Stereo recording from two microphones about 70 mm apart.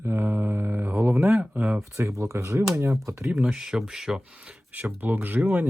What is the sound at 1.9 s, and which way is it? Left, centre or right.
Speech, right.